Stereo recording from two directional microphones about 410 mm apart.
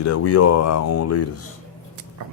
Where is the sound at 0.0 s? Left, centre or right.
Left.